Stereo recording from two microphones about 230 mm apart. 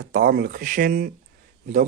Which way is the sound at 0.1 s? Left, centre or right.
Right.